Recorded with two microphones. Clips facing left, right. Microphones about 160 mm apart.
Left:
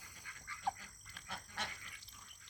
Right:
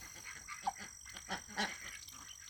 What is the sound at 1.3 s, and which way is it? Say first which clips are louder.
Goat: right 5 dB; 40° right (ahead or behind).